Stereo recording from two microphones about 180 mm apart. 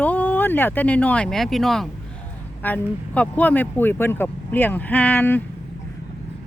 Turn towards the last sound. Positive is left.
turn(degrees=10)  # may be behind; listen again after turning